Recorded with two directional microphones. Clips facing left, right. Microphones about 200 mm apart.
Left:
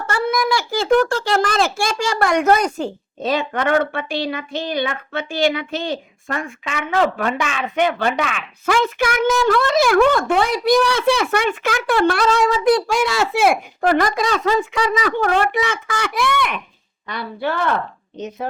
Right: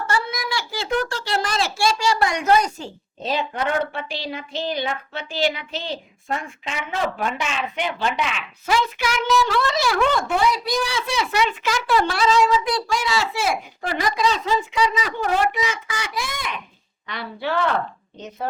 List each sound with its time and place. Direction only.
0.1 s a child's voice: 50° left (ahead or behind)
3.7 s a woman's voice: 70° left (ahead or behind); by 6.0 s 55° left (ahead or behind)
6.7 s speech: 65° left (ahead or behind)
7.6 s a woman's voice: 55° left (ahead or behind)
17.1 s a child's voice: 45° left (ahead or behind)